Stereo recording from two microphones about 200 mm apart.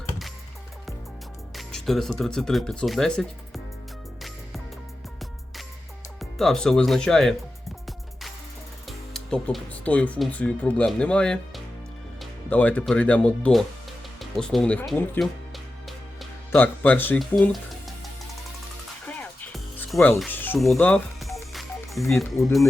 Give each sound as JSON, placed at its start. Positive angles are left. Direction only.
{"t": 1.5, "sound": "speech", "side_deg": 0}
{"t": 6.1, "sound": "speech", "side_deg": 0}
{"t": 8.9, "sound": "speech", "side_deg": 0}
{"t": 14.2, "sound": "music", "side_deg": 0}
{"t": 16.5, "sound": "speech", "side_deg": 10}
{"t": 19.0, "sound": "music", "side_deg": 5}